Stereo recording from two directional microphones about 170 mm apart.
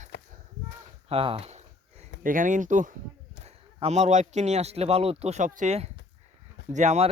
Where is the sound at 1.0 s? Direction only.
35° right (ahead or behind).